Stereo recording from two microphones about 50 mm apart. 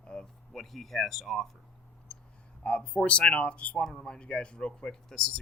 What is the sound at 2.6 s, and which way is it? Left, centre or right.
Speech, left.